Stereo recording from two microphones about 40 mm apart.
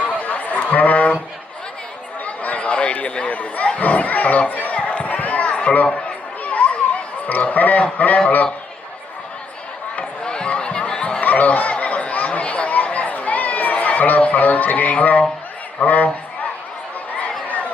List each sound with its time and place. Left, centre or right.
0.2 s chatter: left
2.2 s speech: left
4.7 s a sound: left
5.7 s speech: left
6.4 s children playing: left
7.9 s a man's voice: left
10.0 s chatter: left
11.2 s a sound: left
15.8 s a man's voice: left